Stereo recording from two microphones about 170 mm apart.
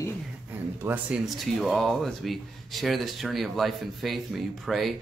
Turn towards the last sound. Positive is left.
turn(degrees=0)  # may be behind; listen again after turning